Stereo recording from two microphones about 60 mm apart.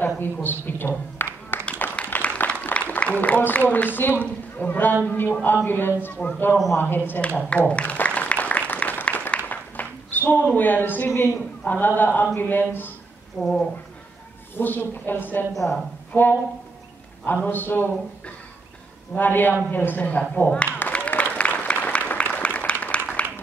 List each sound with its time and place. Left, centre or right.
0.0 s a man's voice: left
1.8 s a sound: left
2.9 s a man's voice: left
6.2 s speech: left
6.8 s a man's voice: left
7.2 s a sound: left
10.5 s a man's voice: left
13.4 s speech: centre
14.6 s a man's voice: left
15.5 s speech: centre
16.1 s a man's voice: left
17.5 s a man's voice: left
19.1 s a man's voice: left
21.2 s applause: left